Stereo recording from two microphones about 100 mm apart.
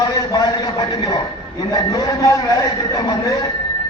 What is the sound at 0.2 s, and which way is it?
A man's voice, 40° left (ahead or behind).